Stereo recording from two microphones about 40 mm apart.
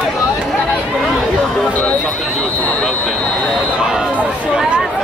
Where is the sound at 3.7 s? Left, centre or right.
Centre.